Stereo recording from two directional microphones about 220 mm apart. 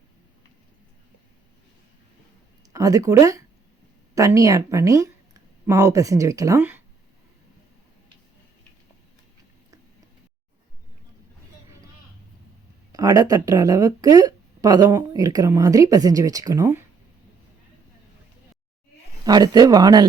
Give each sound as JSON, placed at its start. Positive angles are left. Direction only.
{"t": 2.7, "sound": "speech", "side_deg": -15}
{"t": 12.9, "sound": "speech", "side_deg": -15}
{"t": 19.2, "sound": "speech", "side_deg": -20}